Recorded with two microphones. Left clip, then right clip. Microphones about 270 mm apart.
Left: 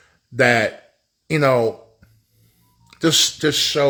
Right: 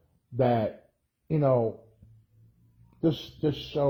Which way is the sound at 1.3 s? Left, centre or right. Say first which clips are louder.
Left 8 dB; left.